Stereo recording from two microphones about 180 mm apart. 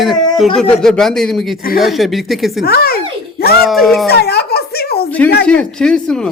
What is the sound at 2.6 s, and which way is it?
Speech, 60° left (ahead or behind).